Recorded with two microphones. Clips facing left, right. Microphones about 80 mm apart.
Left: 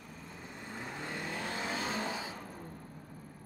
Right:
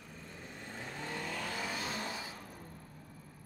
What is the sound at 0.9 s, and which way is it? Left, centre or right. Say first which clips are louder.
Vehicle: even; left.